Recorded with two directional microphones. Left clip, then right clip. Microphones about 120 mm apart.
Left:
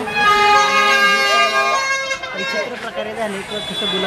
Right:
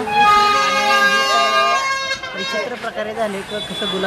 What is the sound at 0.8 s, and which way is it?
Emergency vehicle, 15° left (ahead or behind).